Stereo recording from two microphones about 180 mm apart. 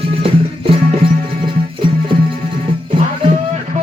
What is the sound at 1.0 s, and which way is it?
Music, 30° right (ahead or behind).